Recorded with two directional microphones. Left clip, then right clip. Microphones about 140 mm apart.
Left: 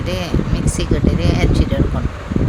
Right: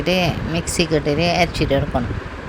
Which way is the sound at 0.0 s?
35° right (ahead or behind).